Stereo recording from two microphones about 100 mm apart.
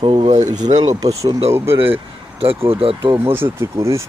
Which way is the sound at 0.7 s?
40° right (ahead or behind).